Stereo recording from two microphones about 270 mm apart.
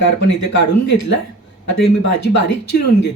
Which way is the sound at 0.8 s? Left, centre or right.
Left.